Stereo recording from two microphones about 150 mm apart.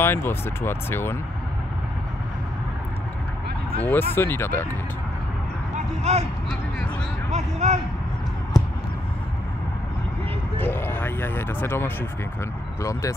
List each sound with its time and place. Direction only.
0.0 s speech: 15° left (ahead or behind)
3.8 s speech: 15° left (ahead or behind)
6.1 s speech: 45° right (ahead or behind)
7.2 s speech: 50° right (ahead or behind)
10.6 s speech: 15° left (ahead or behind)